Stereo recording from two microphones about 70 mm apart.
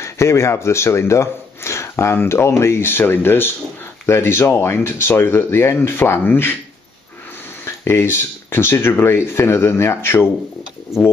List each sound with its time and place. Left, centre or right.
0.0 s speech: left
7.6 s speech: left